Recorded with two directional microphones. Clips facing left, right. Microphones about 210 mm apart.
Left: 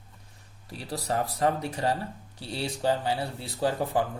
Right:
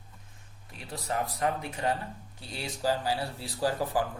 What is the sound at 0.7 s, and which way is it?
Speech, 35° left (ahead or behind).